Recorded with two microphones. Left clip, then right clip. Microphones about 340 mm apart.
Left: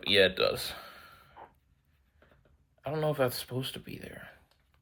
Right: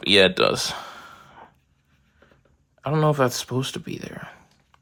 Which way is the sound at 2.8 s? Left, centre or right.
Right.